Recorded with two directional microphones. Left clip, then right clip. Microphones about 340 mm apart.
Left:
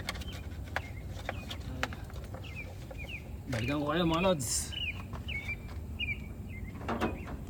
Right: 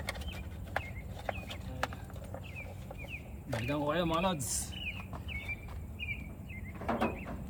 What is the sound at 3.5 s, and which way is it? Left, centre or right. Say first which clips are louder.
Speech: left 1 dB; centre.